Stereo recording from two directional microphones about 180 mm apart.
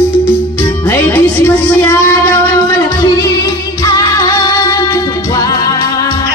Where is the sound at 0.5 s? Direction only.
10° left (ahead or behind).